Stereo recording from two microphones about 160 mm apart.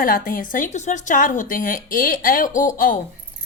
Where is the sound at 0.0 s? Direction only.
60° left (ahead or behind).